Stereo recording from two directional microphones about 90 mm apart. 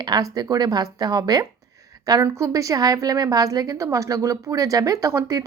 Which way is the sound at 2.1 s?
35° right (ahead or behind).